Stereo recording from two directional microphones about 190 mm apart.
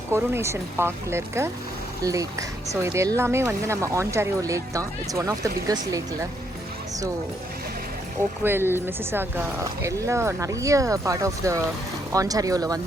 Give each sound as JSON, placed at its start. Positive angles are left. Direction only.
{"t": 0.1, "sound": "speech", "side_deg": -15}
{"t": 2.8, "sound": "speech", "side_deg": -15}
{"t": 8.4, "sound": "speech", "side_deg": -10}